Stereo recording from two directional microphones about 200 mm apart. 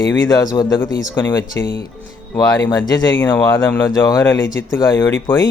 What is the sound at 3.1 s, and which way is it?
Speech, 10° left (ahead or behind).